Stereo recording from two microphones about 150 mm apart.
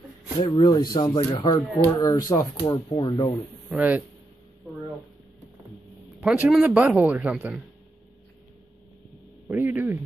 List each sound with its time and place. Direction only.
0.4 s speech: 30° left (ahead or behind)
1.3 s speech: 35° left (ahead or behind)
2.0 s speech: 25° left (ahead or behind)
3.7 s speech: 10° right (ahead or behind)
6.2 s speech: 5° right (ahead or behind)
9.5 s a man's voice: 15° right (ahead or behind)